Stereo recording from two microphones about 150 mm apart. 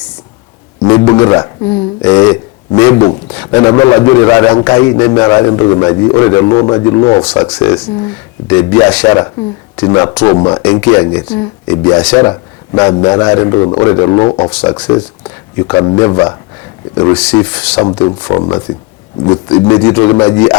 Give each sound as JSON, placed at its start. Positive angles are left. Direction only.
{"t": 0.9, "sound": "didgeridoo", "side_deg": 25}
{"t": 3.0, "sound": "a sound", "side_deg": 35}
{"t": 3.3, "sound": "a man's voice", "side_deg": 25}
{"t": 7.6, "sound": "speech", "side_deg": 15}
{"t": 9.0, "sound": "a man's voice", "side_deg": 25}
{"t": 10.6, "sound": "speech", "side_deg": 10}
{"t": 10.8, "sound": "a man's voice", "side_deg": 20}
{"t": 17.8, "sound": "a man's voice", "side_deg": 25}
{"t": 19.6, "sound": "a man's voice", "side_deg": 20}